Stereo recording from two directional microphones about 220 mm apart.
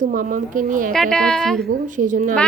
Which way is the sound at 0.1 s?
35° right (ahead or behind).